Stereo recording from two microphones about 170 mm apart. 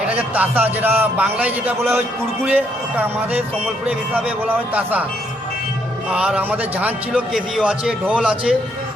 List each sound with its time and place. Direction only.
0.0 s speech: 10° right (ahead or behind)
6.1 s a man's voice: 5° right (ahead or behind)